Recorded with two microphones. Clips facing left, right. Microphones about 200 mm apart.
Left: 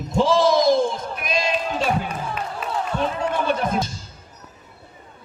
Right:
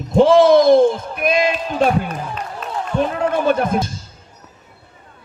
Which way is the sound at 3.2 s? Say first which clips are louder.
Right 8 dB; 50° right (ahead or behind).